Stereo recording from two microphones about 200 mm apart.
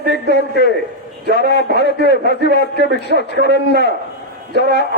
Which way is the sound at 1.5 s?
55° left (ahead or behind).